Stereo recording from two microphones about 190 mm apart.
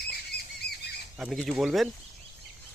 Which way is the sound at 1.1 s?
Centre (ahead or behind).